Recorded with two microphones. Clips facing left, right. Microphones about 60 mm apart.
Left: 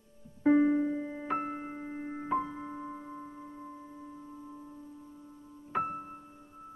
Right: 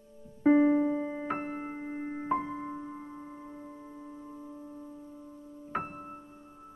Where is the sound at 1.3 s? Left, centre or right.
Centre.